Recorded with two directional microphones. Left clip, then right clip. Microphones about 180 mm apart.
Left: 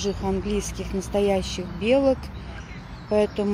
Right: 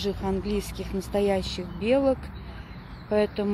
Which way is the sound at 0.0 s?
5° right (ahead or behind).